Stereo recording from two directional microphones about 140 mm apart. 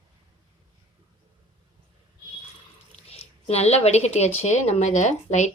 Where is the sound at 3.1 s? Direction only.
45° left (ahead or behind).